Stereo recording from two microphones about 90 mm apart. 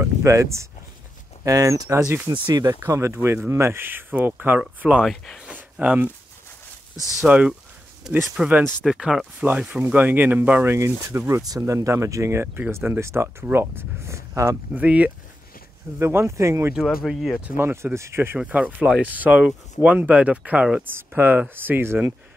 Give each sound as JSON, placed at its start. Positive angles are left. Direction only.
{"t": 0.0, "sound": "speech", "side_deg": -35}
{"t": 2.3, "sound": "speech", "side_deg": -55}
{"t": 2.9, "sound": "speech", "side_deg": -30}
{"t": 5.0, "sound": "speech", "side_deg": 5}
{"t": 5.4, "sound": "a sound", "side_deg": -15}
{"t": 7.2, "sound": "speech", "side_deg": -10}
{"t": 8.8, "sound": "speech", "side_deg": -5}
{"t": 11.4, "sound": "speech", "side_deg": -40}
{"t": 14.8, "sound": "speech", "side_deg": -15}
{"t": 16.0, "sound": "speech", "side_deg": -30}
{"t": 16.8, "sound": "speech", "side_deg": 0}
{"t": 17.6, "sound": "speech", "side_deg": -25}
{"t": 18.4, "sound": "speech", "side_deg": -15}
{"t": 21.2, "sound": "speech", "side_deg": -20}